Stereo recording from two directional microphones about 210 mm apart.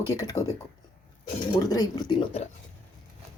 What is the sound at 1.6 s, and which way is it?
Speech, 15° left (ahead or behind).